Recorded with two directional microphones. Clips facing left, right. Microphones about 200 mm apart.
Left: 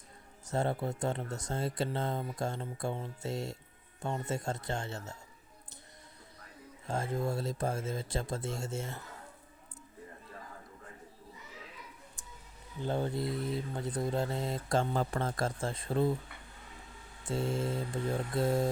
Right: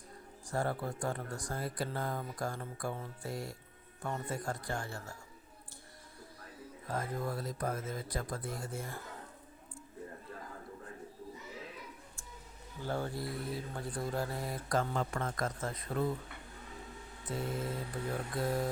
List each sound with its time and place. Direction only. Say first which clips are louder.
0.4 s speech: left 3 dB; 25° left (ahead or behind)
6.8 s speech: left 3 dB; 25° left (ahead or behind)
12.8 s speech: left 4 dB; 20° left (ahead or behind)
17.2 s speech: left 4 dB; 30° left (ahead or behind)